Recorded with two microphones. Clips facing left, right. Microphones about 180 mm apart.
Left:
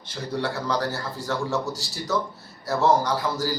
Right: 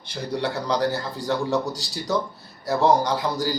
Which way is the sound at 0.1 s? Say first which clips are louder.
Right 2 dB; 15° right (ahead or behind).